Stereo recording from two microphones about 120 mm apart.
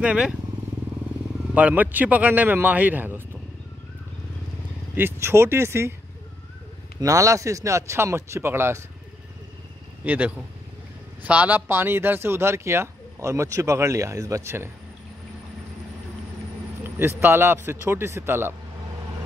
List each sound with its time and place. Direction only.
0.0 s a man's voice: 10° right (ahead or behind)
1.5 s a man's voice: 10° right (ahead or behind)
4.9 s speech: 20° right (ahead or behind)
7.0 s speech: 25° right (ahead or behind)
10.0 s a man's voice: 15° right (ahead or behind)
17.2 s speech: 15° right (ahead or behind)